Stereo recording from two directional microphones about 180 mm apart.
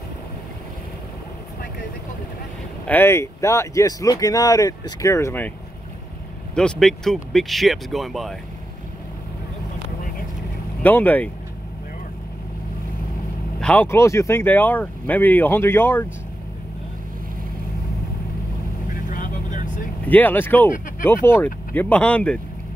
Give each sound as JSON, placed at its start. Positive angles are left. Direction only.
{"t": 2.8, "sound": "speech", "side_deg": 10}
{"t": 6.5, "sound": "speech", "side_deg": 5}
{"t": 10.8, "sound": "speech", "side_deg": 10}
{"t": 13.6, "sound": "speech", "side_deg": 10}
{"t": 18.9, "sound": "vehicle", "side_deg": 50}
{"t": 20.1, "sound": "speech", "side_deg": 10}
{"t": 21.7, "sound": "speech", "side_deg": 10}